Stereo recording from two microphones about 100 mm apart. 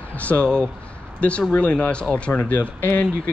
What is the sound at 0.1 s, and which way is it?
Speech, 15° left (ahead or behind).